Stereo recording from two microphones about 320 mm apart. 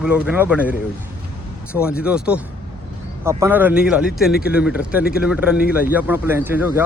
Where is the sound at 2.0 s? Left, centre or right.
Centre.